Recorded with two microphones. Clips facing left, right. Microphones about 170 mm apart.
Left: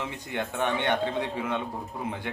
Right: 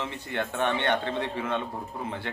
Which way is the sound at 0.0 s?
10° left (ahead or behind).